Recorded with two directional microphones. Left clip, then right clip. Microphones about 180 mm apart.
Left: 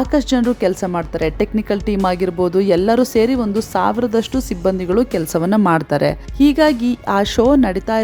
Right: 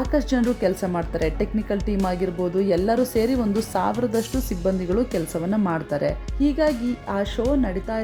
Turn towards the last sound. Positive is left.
turn(degrees=30)  # may be behind; listen again after turning